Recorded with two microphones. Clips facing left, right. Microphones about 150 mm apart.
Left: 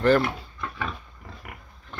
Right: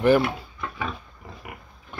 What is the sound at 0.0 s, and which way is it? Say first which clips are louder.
Pig: right 1 dB; 10° right (ahead or behind).